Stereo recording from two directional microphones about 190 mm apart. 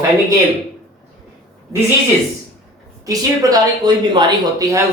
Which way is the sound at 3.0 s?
20° right (ahead or behind).